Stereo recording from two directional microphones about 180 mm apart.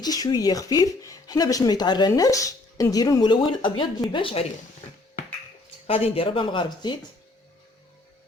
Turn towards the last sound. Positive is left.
turn(degrees=25)  # may be behind; listen again after turning